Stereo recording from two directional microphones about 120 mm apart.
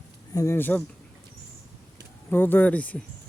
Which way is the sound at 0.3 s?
20° left (ahead or behind).